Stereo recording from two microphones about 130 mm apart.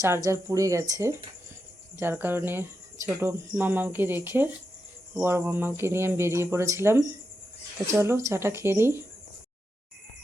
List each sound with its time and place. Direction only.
0.0 s speech: 20° right (ahead or behind)